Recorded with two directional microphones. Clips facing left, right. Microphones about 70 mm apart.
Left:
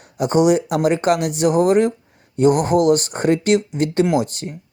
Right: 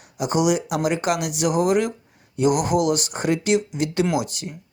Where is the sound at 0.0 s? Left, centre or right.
Left.